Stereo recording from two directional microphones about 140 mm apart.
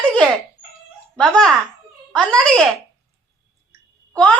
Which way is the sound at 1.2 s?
5° left (ahead or behind).